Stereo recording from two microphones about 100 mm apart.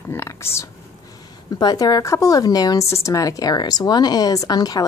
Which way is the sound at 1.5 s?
40° left (ahead or behind).